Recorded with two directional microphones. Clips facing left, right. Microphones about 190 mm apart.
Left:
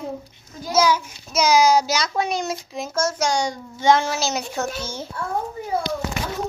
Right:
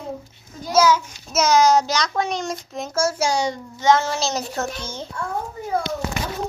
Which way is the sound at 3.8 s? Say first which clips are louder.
Even; 10° left (ahead or behind).